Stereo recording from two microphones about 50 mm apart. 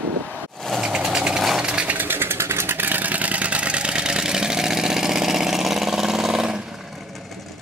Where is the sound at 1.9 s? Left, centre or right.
Right.